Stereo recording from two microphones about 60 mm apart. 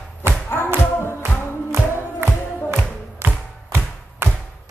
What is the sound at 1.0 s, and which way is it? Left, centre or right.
Music, left.